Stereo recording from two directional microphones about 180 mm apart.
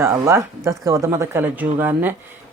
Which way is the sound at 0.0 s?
15° right (ahead or behind).